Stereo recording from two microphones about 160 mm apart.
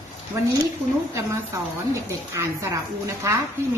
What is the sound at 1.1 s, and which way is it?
A woman's voice, 15° right (ahead or behind).